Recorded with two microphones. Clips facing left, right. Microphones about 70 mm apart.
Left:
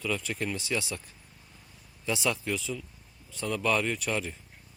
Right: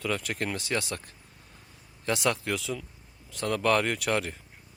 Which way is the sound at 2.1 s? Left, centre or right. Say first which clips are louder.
Right 2 dB; right.